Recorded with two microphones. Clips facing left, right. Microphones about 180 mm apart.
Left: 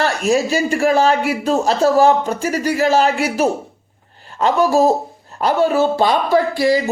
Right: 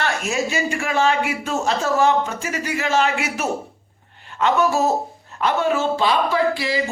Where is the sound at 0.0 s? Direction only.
35° left (ahead or behind).